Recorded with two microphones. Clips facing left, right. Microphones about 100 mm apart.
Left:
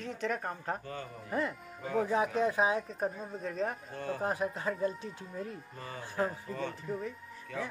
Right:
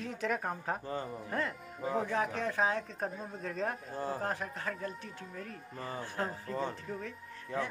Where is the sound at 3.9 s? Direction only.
35° right (ahead or behind).